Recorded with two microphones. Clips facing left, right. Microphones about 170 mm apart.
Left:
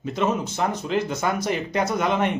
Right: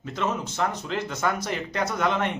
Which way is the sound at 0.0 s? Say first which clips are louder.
Left 5 dB; 15° left (ahead or behind).